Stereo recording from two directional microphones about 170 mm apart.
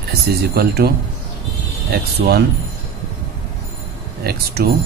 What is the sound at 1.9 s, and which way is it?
Speech, 65° right (ahead or behind).